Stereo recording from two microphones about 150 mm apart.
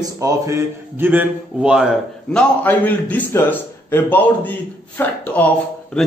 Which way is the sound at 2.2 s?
10° left (ahead or behind).